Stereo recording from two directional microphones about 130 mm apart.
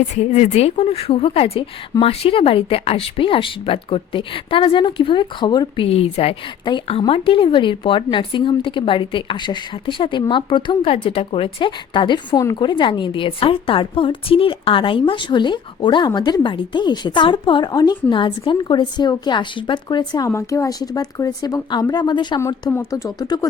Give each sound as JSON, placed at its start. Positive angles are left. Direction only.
{"t": 0.1, "sound": "a woman's voice", "side_deg": 60}